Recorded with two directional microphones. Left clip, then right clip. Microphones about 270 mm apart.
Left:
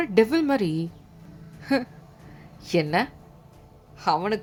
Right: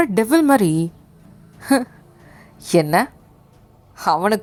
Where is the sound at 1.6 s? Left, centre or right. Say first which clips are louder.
Right 7 dB; right.